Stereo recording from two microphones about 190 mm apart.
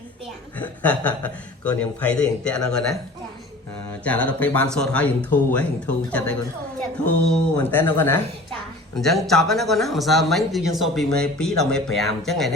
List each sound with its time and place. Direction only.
0.6 s a man's voice: 10° left (ahead or behind)
4.0 s a man's voice: 5° left (ahead or behind)
9.0 s speech: centre (ahead or behind)